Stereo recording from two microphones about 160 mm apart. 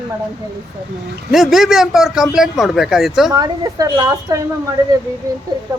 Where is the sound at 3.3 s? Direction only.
25° right (ahead or behind).